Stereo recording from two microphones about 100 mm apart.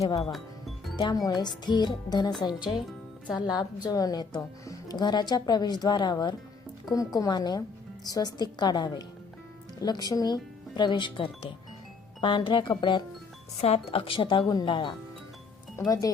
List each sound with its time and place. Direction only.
0.0 s speech: 40° left (ahead or behind)
0.3 s music: centre (ahead or behind)
1.1 s speech: 40° left (ahead or behind)
6.9 s speech: 35° left (ahead or behind); by 13.0 s 50° left (ahead or behind)
13.6 s speech: 90° left; by 14.3 s 60° left (ahead or behind)
14.3 s speech: 45° left (ahead or behind)
15.9 s speech: 35° left (ahead or behind)